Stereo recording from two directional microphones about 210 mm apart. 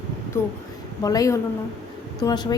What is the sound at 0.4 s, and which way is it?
A woman's voice, 10° left (ahead or behind).